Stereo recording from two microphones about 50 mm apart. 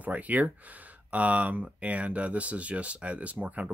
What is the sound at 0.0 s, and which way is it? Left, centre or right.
Speech, right.